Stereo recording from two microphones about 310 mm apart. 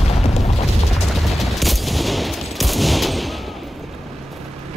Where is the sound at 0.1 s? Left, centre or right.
Centre.